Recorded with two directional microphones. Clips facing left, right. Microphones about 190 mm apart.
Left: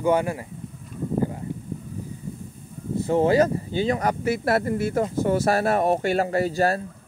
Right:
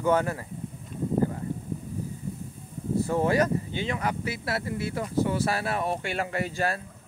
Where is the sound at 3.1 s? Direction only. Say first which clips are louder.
Left 6 dB; 25° left (ahead or behind).